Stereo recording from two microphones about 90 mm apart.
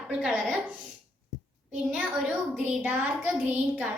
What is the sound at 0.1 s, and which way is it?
Speech, 5° right (ahead or behind).